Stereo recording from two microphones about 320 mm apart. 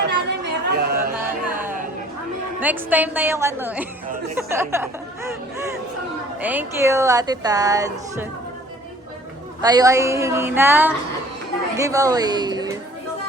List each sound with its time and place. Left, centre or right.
0.1 s chatter: right
1.2 s music: centre
2.6 s a woman's voice: centre
6.4 s speech: centre
9.6 s speech: centre